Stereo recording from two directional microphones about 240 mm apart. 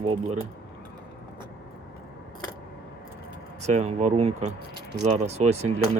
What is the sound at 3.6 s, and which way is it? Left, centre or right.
Speech, right.